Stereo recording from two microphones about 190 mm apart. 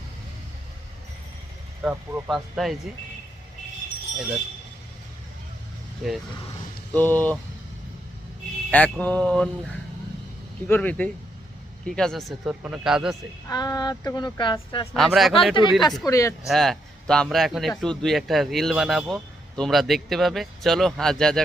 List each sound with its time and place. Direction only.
1.8 s speech: 10° right (ahead or behind)
6.9 s mantra: 10° left (ahead or behind)
8.7 s mantra: 10° left (ahead or behind)
10.7 s mantra: 5° left (ahead or behind)
11.9 s speech: 5° left (ahead or behind)
13.5 s speech: 20° left (ahead or behind)
14.9 s speech: centre (ahead or behind)
15.8 s mantra: 20° left (ahead or behind)
16.5 s speech: centre (ahead or behind)